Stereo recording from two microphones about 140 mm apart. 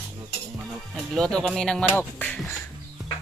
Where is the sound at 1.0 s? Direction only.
5° left (ahead or behind).